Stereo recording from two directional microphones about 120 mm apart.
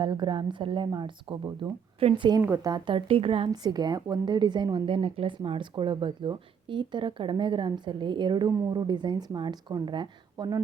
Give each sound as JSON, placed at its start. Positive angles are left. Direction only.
{"t": 0.0, "sound": "a woman's voice", "side_deg": -40}
{"t": 2.0, "sound": "speech", "side_deg": -50}
{"t": 2.4, "sound": "speech", "side_deg": -20}
{"t": 2.6, "sound": "speech", "side_deg": -40}
{"t": 3.5, "sound": "a woman's voice", "side_deg": -35}